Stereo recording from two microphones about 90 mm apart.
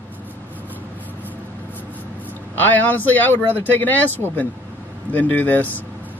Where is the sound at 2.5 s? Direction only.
20° left (ahead or behind).